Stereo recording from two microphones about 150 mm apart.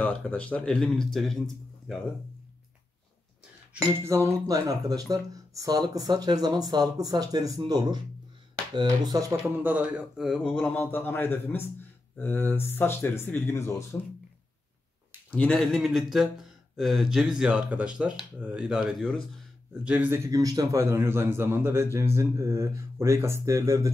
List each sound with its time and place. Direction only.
0.0 s speech: 10° left (ahead or behind)
3.7 s speech: 15° right (ahead or behind)
9.6 s speech: 10° right (ahead or behind); by 13.8 s 15° left (ahead or behind)
15.3 s a man's voice: 5° left (ahead or behind)
20.2 s a man's voice: 20° right (ahead or behind)